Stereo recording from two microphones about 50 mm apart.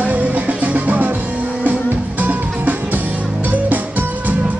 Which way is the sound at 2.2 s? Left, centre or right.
Right.